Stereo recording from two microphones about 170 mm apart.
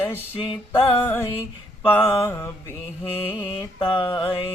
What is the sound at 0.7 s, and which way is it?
Mantra, 15° left (ahead or behind).